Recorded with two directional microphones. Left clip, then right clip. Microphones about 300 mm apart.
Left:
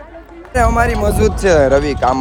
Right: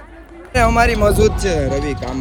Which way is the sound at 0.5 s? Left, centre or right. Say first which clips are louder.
Even; centre.